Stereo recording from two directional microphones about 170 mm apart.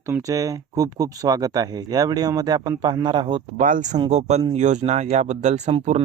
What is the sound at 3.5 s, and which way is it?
Speech, 50° right (ahead or behind).